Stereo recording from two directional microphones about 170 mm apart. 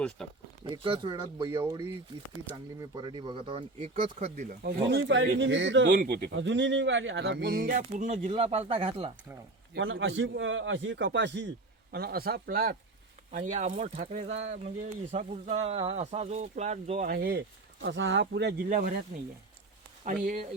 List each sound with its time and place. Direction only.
0.2 s speech: 5° left (ahead or behind)
0.6 s speech: 30° right (ahead or behind)
2.9 s speech: 30° right (ahead or behind)
4.0 s speech: 50° right (ahead or behind)
4.9 s a man's voice: 90° right
6.0 s speech: 65° right (ahead or behind); by 9.1 s 35° right (ahead or behind)
9.7 s a man's voice: 90° right; by 12.7 s 60° right (ahead or behind)
13.3 s speech: 45° right (ahead or behind); by 17.4 s 65° right (ahead or behind)
17.8 s speech: 90° right; by 19.0 s 55° right (ahead or behind)
20.1 s speech: 55° right (ahead or behind)